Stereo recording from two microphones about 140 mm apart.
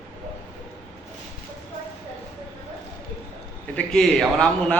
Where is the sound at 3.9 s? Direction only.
Centre (ahead or behind).